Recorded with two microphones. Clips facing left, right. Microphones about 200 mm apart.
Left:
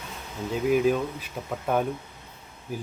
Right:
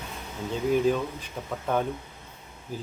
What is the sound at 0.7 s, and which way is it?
Speech, 10° left (ahead or behind).